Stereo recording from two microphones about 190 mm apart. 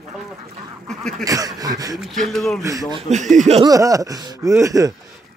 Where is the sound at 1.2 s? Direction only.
20° right (ahead or behind).